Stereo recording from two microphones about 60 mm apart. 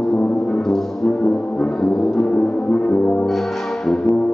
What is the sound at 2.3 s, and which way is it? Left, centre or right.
Music, left.